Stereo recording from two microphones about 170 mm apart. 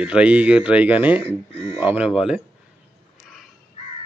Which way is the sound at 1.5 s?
35° left (ahead or behind).